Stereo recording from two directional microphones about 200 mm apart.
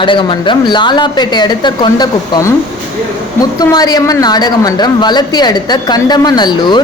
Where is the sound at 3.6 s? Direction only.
20° left (ahead or behind).